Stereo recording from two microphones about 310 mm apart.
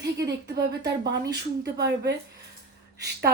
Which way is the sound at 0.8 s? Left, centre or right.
Right.